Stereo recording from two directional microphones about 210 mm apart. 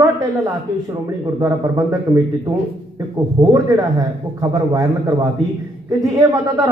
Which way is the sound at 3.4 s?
25° right (ahead or behind).